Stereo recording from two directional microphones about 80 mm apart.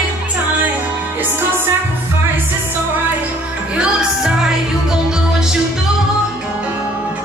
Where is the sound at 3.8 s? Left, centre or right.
Centre.